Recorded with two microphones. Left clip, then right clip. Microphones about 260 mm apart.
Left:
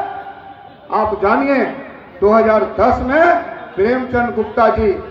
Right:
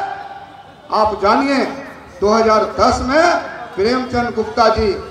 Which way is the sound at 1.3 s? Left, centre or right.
Right.